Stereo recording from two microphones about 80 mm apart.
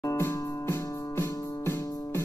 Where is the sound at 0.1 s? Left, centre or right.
Left.